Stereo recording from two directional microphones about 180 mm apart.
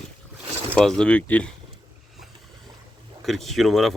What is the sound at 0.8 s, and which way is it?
Speech, 5° left (ahead or behind).